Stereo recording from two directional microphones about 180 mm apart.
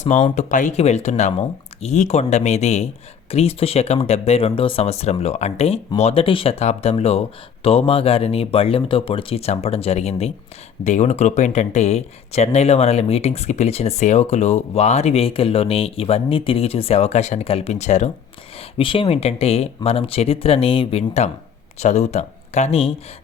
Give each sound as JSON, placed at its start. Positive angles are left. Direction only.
{"t": 0.0, "sound": "speech", "side_deg": 40}